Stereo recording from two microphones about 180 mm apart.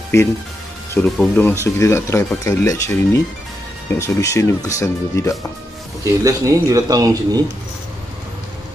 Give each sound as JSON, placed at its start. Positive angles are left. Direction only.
{"t": 0.1, "sound": "speech", "side_deg": 15}
{"t": 0.9, "sound": "speech", "side_deg": 5}
{"t": 6.2, "sound": "speech", "side_deg": -20}